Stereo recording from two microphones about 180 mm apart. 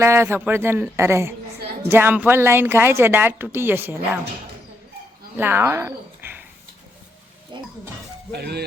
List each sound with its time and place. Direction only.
0.0 s a woman's voice: 15° right (ahead or behind)
5.4 s speech: 10° right (ahead or behind)
7.5 s a sound: 25° right (ahead or behind)
8.3 s speech: 65° right (ahead or behind)